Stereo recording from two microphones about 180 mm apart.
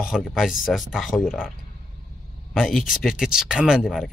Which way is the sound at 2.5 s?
Centre (ahead or behind).